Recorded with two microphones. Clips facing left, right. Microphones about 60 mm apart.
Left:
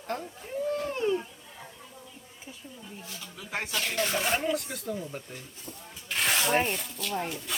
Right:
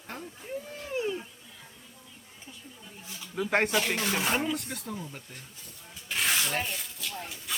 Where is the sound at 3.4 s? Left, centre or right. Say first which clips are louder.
Right 9 dB; right.